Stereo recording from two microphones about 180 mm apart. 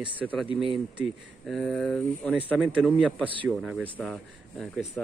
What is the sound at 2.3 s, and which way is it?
Speech, 5° right (ahead or behind).